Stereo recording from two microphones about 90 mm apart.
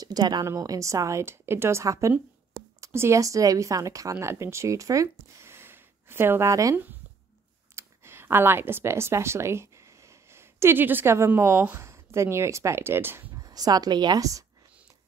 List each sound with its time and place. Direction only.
0.0 s a woman's voice: 45° right (ahead or behind); by 13.3 s 25° right (ahead or behind)
13.4 s speech: 45° right (ahead or behind)